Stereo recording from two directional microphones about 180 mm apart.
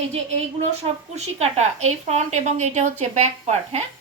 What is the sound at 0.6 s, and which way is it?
A woman's voice, 35° right (ahead or behind).